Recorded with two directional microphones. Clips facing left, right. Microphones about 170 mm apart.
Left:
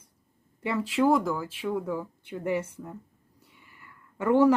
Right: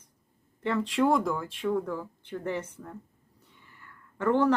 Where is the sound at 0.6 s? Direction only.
10° left (ahead or behind).